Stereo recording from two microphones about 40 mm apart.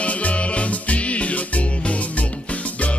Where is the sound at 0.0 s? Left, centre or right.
Left.